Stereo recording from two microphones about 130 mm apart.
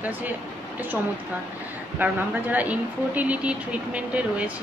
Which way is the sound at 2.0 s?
15° right (ahead or behind).